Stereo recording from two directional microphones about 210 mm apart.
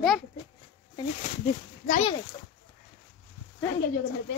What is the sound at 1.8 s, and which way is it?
Speech, 35° left (ahead or behind).